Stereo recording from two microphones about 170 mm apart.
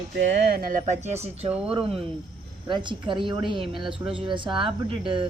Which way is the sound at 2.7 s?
30° right (ahead or behind).